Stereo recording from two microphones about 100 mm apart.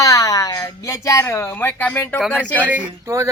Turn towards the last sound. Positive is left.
turn(degrees=-15)  # may be behind; listen again after turning